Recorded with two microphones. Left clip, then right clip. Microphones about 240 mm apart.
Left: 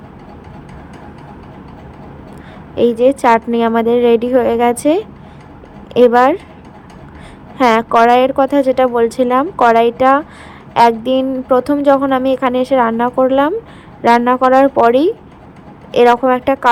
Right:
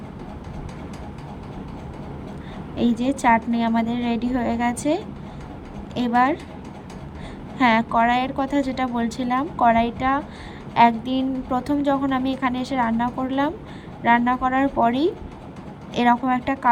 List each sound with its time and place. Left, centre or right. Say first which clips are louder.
2.7 s a woman's voice: left 13 dB; centre
7.6 s a woman's voice: left 8 dB; centre